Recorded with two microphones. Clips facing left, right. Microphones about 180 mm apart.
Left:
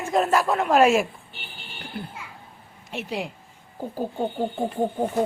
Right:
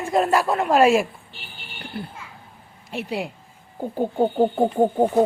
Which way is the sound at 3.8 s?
25° right (ahead or behind).